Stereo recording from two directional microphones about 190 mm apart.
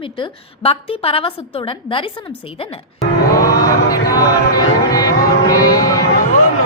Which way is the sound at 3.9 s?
20° left (ahead or behind).